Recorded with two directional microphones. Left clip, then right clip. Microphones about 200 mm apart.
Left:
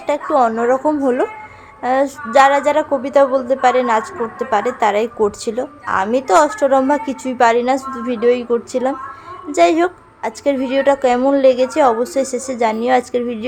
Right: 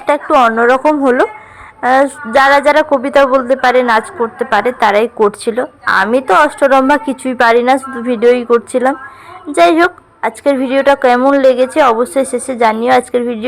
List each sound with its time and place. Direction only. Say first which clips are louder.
0.0 s a woman's voice: right 5 dB; 10° right (ahead or behind)